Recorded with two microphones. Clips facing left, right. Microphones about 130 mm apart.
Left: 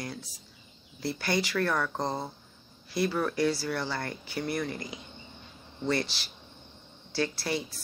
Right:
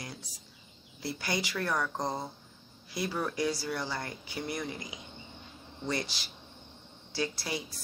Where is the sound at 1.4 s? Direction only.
20° right (ahead or behind).